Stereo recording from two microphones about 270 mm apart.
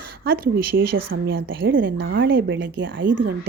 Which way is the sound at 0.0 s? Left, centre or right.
Right.